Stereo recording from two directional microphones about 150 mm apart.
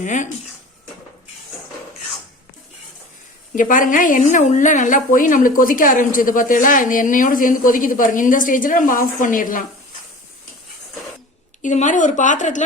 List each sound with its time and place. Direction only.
0.0 s a woman's voice: 55° left (ahead or behind)
3.5 s a woman's voice: 65° left (ahead or behind)
11.6 s a woman's voice: 55° left (ahead or behind)